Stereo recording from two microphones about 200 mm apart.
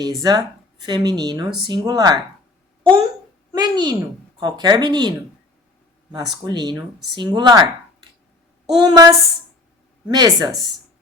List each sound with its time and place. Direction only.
0.2 s speech: 20° right (ahead or behind)
3.5 s a sound: 20° right (ahead or behind)
4.4 s speech: 20° right (ahead or behind)
6.3 s speech: 20° right (ahead or behind)
8.7 s speech: 20° right (ahead or behind)